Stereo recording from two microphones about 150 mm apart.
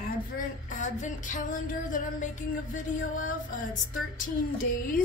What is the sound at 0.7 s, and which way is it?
A woman's voice, 55° left (ahead or behind).